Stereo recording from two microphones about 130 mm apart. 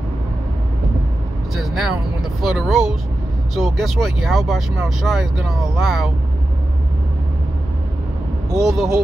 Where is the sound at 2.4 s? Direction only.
Centre (ahead or behind).